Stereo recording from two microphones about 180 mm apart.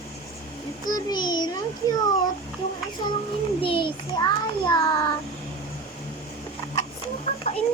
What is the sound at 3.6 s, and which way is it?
Child singing, 30° left (ahead or behind).